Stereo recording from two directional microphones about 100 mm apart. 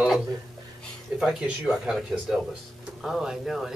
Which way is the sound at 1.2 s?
5° right (ahead or behind).